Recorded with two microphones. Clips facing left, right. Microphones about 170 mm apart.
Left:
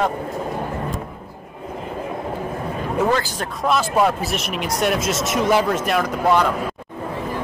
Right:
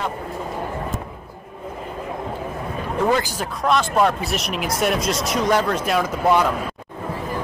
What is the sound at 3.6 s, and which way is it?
Speech, 5° left (ahead or behind).